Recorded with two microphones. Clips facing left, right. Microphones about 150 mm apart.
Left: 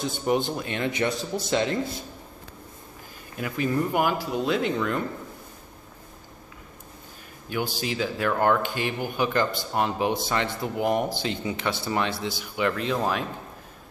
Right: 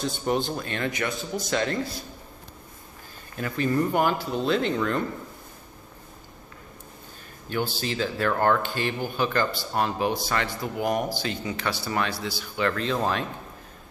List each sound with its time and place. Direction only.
0.0 s speech: 15° left (ahead or behind)
3.3 s speech: 10° left (ahead or behind)
7.4 s speech: 10° left (ahead or behind)